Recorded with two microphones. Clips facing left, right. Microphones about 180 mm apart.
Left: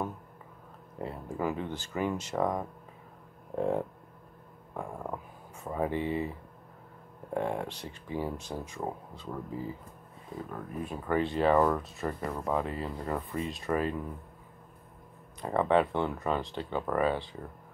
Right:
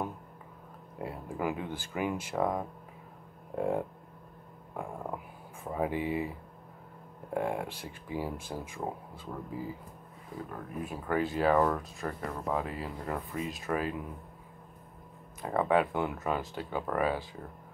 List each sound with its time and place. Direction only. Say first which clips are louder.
0.9 s speech: left 1 dB; 10° right (ahead or behind)
7.3 s speech: even; 10° right (ahead or behind)
10.5 s speech: left 1 dB; 5° right (ahead or behind)
12.4 s speech: left 2 dB; 5° right (ahead or behind)
15.4 s speech: left 1 dB; 5° right (ahead or behind)